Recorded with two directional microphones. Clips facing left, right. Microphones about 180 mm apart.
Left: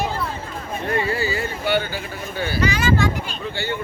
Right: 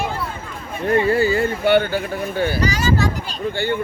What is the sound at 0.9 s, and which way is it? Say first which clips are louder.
Speech: right 7 dB; 50° right (ahead or behind).